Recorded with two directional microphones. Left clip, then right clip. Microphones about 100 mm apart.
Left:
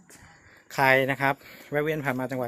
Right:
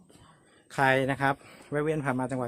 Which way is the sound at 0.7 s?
20° right (ahead or behind).